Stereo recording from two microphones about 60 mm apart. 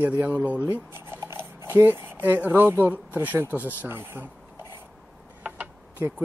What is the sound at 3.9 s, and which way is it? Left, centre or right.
Speech, right.